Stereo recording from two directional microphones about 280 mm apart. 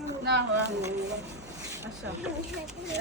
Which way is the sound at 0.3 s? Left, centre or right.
Right.